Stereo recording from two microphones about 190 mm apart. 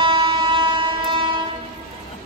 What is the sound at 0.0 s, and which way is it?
Train, 25° right (ahead or behind).